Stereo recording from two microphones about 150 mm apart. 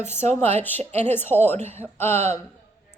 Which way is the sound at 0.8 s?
45° right (ahead or behind).